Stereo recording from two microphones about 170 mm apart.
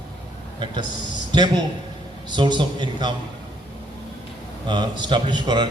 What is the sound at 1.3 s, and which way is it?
A man's voice, 25° right (ahead or behind).